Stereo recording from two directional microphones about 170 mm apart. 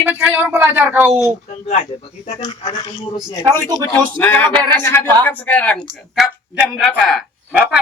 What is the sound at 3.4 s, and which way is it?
Speech, 20° right (ahead or behind).